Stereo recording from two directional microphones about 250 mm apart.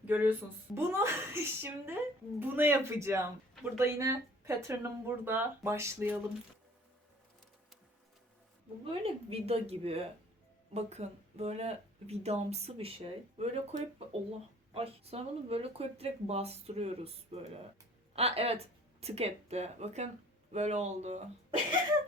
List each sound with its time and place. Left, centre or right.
0.0 s speech: centre
8.8 s speech: right